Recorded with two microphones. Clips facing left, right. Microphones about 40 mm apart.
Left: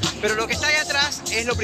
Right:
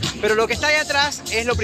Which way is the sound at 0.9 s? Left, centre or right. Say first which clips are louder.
Right 3 dB; centre.